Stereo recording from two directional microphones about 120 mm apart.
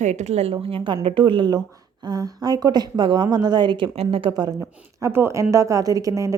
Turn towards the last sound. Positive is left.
turn(degrees=-25)  # may be behind; listen again after turning